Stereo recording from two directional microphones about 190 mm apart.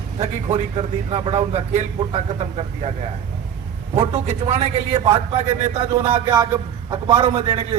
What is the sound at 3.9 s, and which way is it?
Speech, 35° right (ahead or behind).